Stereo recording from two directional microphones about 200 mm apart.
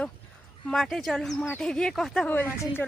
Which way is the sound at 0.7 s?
Centre (ahead or behind).